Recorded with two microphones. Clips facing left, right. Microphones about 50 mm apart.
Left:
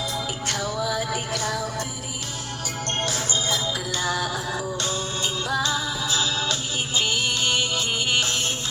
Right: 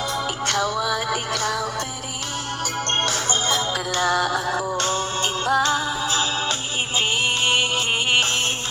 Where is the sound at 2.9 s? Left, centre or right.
Right.